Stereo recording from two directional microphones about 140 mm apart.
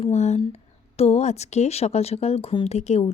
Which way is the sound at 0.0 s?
55° left (ahead or behind).